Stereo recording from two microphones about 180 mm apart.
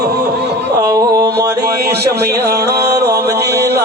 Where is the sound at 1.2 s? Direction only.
65° right (ahead or behind).